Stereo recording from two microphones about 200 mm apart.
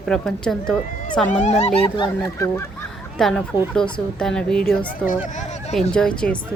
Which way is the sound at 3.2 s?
Centre (ahead or behind).